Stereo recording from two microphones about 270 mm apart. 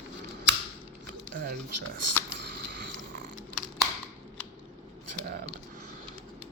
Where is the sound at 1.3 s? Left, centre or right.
Right.